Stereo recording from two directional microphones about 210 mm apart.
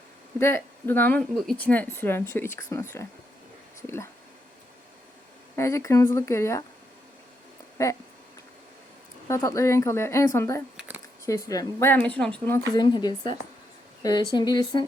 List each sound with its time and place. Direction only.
0.3 s speech: 10° left (ahead or behind)
3.8 s speech: 10° left (ahead or behind)
5.5 s speech: 15° left (ahead or behind)
7.8 s speech: 15° left (ahead or behind)
9.2 s speech: 15° left (ahead or behind)
10.8 s a sound: 5° right (ahead or behind)
11.3 s speech: 15° left (ahead or behind)